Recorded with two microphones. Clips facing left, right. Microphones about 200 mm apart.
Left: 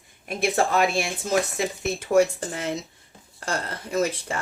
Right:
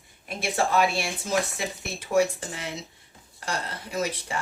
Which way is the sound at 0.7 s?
50° left (ahead or behind).